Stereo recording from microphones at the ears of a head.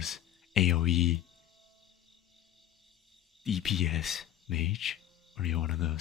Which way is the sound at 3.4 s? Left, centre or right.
Left.